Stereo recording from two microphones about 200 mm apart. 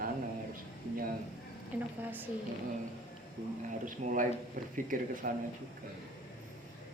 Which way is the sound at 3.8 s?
40° right (ahead or behind).